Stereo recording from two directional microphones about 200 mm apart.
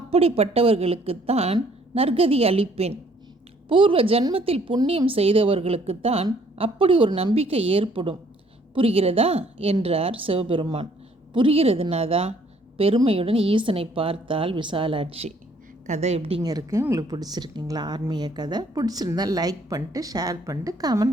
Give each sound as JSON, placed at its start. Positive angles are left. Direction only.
{"t": 0.1, "sound": "a woman's voice", "side_deg": -30}